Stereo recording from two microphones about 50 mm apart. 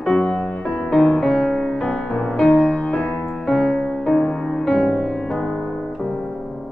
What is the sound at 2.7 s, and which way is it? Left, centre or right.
Music, centre.